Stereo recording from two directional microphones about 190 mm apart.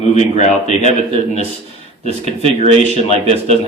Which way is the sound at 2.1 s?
30° right (ahead or behind).